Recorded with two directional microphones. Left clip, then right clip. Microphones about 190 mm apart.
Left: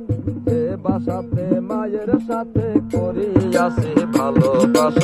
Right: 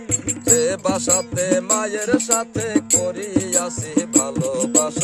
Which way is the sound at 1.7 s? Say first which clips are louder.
Right 1 dB; 15° right (ahead or behind).